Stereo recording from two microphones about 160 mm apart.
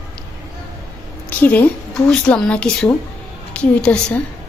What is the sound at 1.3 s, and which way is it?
A woman's voice, 10° left (ahead or behind).